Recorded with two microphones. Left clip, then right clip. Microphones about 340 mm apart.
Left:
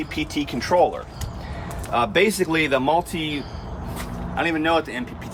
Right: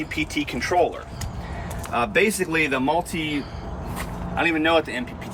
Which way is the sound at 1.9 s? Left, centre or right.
Left.